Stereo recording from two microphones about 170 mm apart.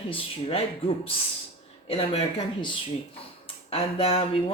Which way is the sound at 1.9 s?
35° left (ahead or behind).